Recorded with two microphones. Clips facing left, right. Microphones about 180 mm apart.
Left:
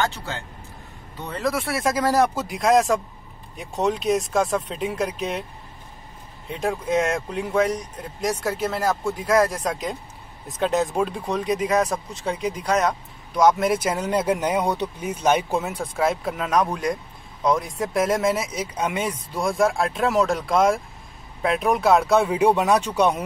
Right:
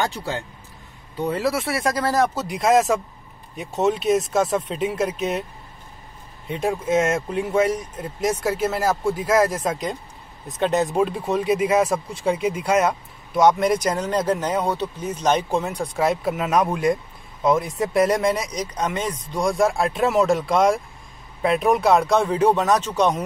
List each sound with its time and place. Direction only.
0.1 s speech: 15° right (ahead or behind)
6.5 s speech: centre (ahead or behind)